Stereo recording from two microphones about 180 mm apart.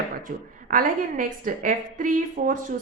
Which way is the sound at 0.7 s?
50° right (ahead or behind).